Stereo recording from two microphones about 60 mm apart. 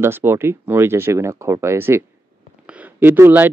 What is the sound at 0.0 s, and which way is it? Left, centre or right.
Speech, right.